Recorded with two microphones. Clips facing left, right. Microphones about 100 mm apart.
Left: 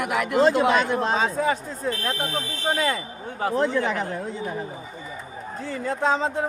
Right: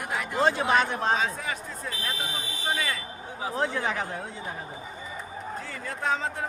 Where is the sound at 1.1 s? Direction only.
35° left (ahead or behind).